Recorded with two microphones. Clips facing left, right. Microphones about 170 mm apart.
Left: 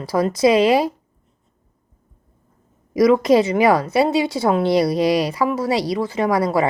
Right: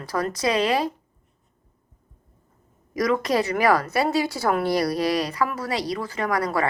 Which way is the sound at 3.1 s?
25° left (ahead or behind).